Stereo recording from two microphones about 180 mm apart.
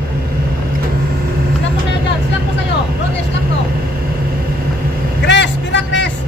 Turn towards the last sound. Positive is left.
turn(degrees=80)